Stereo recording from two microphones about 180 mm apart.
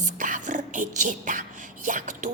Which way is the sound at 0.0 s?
45° right (ahead or behind).